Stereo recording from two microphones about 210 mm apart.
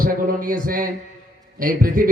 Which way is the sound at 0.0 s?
40° right (ahead or behind).